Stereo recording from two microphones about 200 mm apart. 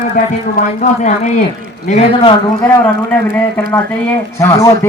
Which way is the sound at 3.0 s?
10° left (ahead or behind).